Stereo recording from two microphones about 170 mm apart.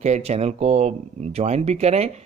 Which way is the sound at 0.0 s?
40° right (ahead or behind).